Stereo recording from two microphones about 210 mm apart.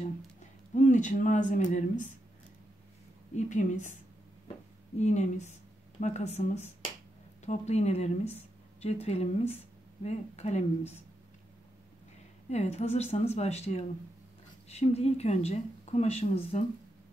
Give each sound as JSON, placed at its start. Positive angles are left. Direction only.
{"t": 0.7, "sound": "speech", "side_deg": 35}
{"t": 3.3, "sound": "speech", "side_deg": 35}
{"t": 4.9, "sound": "speech", "side_deg": 35}
{"t": 12.4, "sound": "speech", "side_deg": 30}